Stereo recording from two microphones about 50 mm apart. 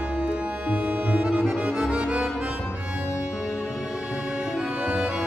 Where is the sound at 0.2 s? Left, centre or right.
Right.